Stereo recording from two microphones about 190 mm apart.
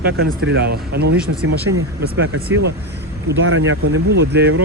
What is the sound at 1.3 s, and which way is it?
Speech, 90° right.